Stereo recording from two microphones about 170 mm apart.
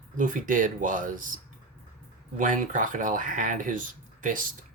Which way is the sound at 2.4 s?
50° right (ahead or behind).